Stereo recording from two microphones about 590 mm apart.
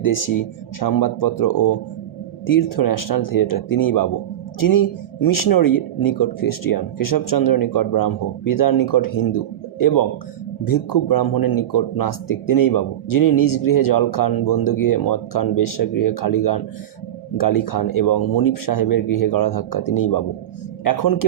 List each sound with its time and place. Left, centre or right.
0.0 s speech: left